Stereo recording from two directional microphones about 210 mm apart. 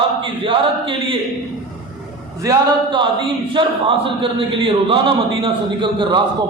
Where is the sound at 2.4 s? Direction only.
20° right (ahead or behind).